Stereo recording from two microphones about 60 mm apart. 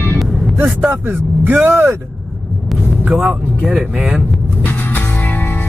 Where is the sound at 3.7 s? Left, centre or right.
Centre.